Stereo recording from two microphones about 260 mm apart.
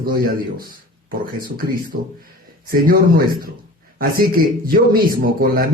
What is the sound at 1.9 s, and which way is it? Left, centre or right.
A man's voice, right.